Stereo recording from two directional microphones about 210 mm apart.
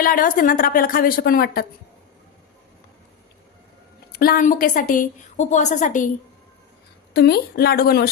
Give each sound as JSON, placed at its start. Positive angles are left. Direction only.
{"t": 0.0, "sound": "a woman's voice", "side_deg": 40}
{"t": 4.1, "sound": "a woman's voice", "side_deg": 45}
{"t": 7.1, "sound": "a woman's voice", "side_deg": 50}